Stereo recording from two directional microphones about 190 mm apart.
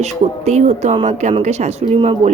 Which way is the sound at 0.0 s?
35° right (ahead or behind).